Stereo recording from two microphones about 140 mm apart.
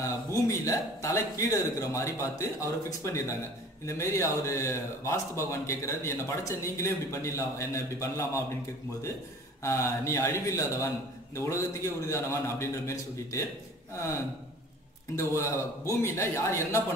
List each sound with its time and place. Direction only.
0.0 s a man's voice: 20° left (ahead or behind)
9.6 s a man's voice: 20° left (ahead or behind)
15.1 s a man's voice: 20° left (ahead or behind)